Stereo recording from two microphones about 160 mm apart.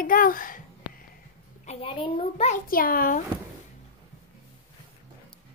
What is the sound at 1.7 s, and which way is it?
Speech, 35° left (ahead or behind).